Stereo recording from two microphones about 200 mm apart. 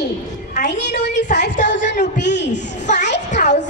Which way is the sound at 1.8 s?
40° left (ahead or behind).